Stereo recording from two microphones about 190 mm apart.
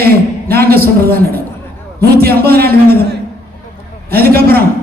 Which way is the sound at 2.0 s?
55° right (ahead or behind).